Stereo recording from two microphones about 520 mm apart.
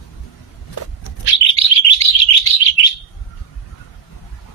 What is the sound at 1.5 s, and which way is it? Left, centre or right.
Bird, left.